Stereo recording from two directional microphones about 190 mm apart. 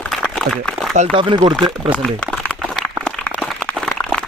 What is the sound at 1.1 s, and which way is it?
Speech, 25° right (ahead or behind).